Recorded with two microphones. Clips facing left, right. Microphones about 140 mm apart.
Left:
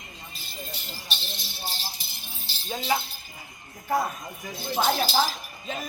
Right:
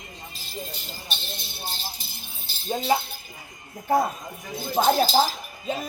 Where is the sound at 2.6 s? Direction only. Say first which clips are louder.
Right 5 dB; 25° right (ahead or behind).